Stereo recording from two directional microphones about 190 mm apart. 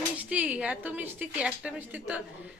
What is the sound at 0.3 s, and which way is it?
A woman's voice, 5° right (ahead or behind).